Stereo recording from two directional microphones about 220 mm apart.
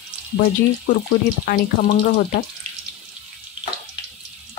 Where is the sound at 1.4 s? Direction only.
40° left (ahead or behind).